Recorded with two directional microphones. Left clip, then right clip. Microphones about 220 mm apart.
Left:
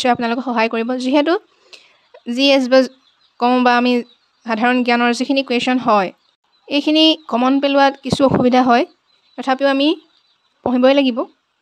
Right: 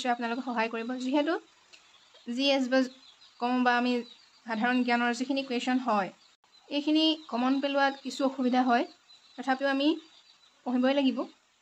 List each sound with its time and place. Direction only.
0.0 s speech: 50° left (ahead or behind)